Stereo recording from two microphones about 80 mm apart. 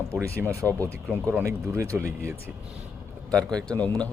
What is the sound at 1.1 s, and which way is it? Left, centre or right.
Speech, right.